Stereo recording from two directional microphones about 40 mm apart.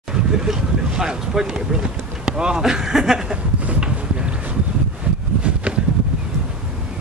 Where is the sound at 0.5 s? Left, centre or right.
Centre.